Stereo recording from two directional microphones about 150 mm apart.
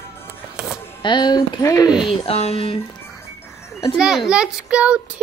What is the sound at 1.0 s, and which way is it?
Speech, 30° left (ahead or behind).